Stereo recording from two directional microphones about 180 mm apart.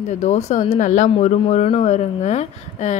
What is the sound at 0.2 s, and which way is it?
Speech, 40° left (ahead or behind).